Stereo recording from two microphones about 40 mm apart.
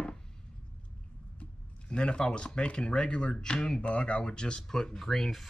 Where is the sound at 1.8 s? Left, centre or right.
Left; by 5.4 s centre.